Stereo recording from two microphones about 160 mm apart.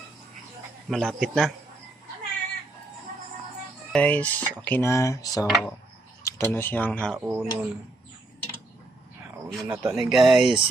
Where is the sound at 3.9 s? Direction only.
10° left (ahead or behind).